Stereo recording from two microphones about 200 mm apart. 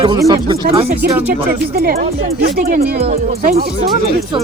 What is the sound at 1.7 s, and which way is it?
Speech, 50° right (ahead or behind).